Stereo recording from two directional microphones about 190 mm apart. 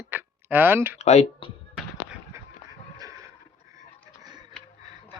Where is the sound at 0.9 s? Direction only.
35° left (ahead or behind).